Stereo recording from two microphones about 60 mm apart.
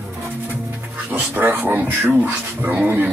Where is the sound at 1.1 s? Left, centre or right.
Right.